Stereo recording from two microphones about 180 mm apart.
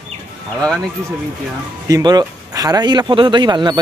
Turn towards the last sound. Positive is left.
turn(degrees=-25)  # may be behind; listen again after turning